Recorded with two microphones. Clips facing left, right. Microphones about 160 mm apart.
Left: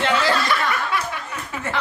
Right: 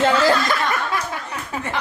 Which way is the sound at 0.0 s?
45° right (ahead or behind).